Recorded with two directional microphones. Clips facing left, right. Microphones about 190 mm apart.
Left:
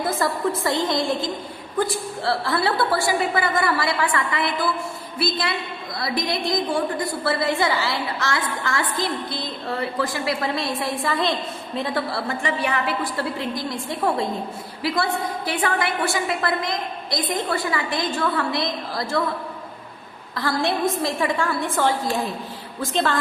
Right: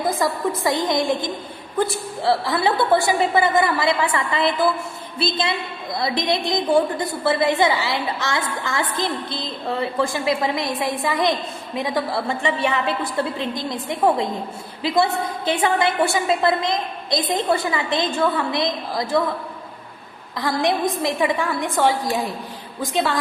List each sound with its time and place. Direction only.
0.0 s a woman's voice: 15° right (ahead or behind)
20.3 s a woman's voice: 15° right (ahead or behind)